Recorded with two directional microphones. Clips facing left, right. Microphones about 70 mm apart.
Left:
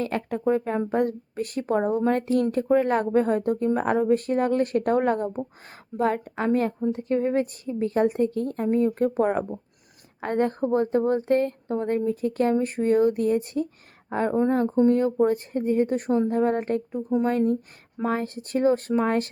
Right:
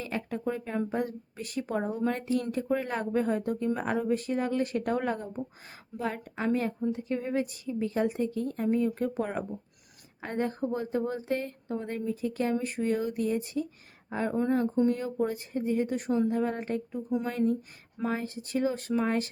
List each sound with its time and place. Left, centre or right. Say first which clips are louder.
0.0 s speech: left 7 dB; left